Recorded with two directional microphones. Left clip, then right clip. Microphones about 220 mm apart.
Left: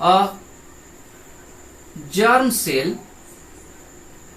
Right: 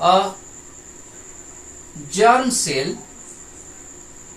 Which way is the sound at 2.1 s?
15° right (ahead or behind).